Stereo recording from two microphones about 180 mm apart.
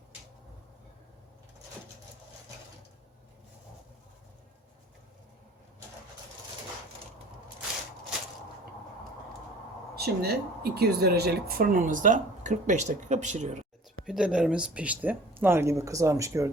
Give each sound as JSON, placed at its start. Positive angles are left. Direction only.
{"t": 9.9, "sound": "speech", "side_deg": -60}
{"t": 14.0, "sound": "speech", "side_deg": -5}